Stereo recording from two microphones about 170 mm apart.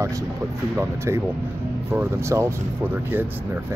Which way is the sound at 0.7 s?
15° right (ahead or behind).